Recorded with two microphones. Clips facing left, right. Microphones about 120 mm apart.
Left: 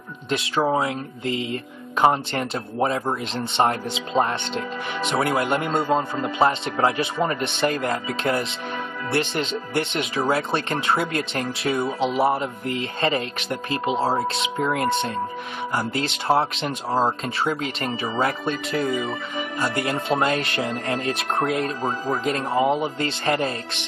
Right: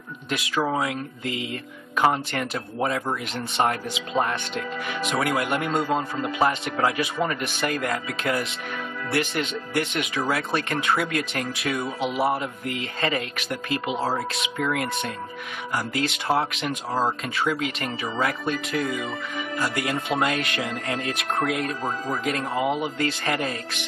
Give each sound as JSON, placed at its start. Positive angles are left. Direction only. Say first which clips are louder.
{"t": 0.3, "sound": "speech", "louder": "left 3 dB", "side_deg": 30}